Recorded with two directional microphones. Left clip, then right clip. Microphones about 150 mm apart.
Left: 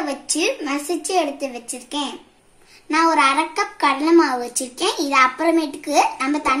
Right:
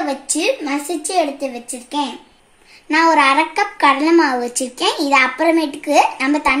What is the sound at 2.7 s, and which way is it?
A child's voice, 50° right (ahead or behind).